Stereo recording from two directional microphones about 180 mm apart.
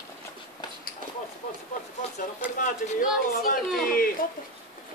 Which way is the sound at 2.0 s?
35° left (ahead or behind).